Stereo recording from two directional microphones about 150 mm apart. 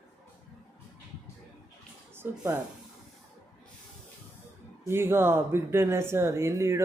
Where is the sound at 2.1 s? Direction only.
15° right (ahead or behind).